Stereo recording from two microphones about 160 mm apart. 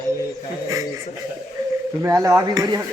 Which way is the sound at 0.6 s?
20° right (ahead or behind).